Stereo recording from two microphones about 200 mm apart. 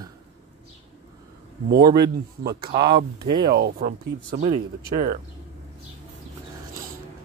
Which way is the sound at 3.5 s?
50° right (ahead or behind).